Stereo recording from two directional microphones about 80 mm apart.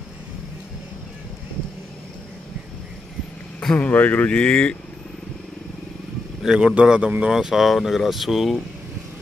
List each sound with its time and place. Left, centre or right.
3.7 s speech: centre
6.4 s a man's voice: centre
7.3 s speech: centre